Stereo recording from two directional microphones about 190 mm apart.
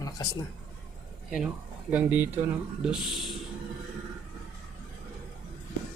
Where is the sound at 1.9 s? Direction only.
10° right (ahead or behind).